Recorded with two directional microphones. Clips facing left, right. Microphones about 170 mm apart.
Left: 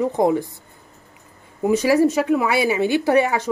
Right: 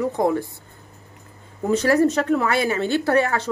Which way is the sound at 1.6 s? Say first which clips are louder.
Left 2 dB; 10° left (ahead or behind).